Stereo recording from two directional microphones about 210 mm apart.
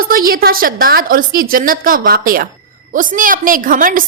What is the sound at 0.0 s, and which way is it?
A woman's voice, 45° right (ahead or behind).